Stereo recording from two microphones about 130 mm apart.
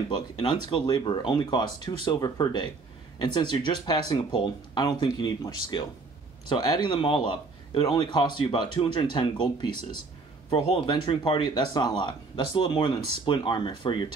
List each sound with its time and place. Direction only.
0.1 s speech: 35° left (ahead or behind)